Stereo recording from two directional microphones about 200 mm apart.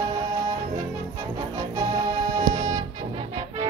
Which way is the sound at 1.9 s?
20° right (ahead or behind).